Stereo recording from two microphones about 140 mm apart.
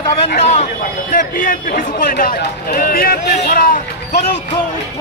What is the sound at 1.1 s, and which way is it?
Speech, 80° left.